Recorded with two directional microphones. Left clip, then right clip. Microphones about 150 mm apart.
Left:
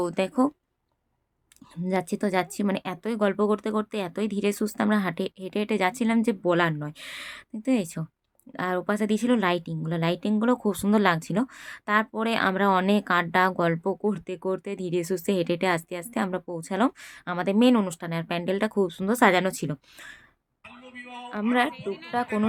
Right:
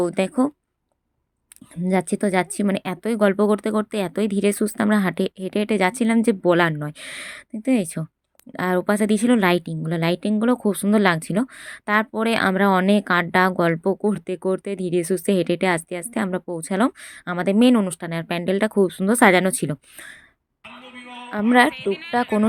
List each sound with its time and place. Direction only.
0.0 s speech: 25° right (ahead or behind)
1.9 s speech: 30° right (ahead or behind)
22.1 s speech: 40° right (ahead or behind)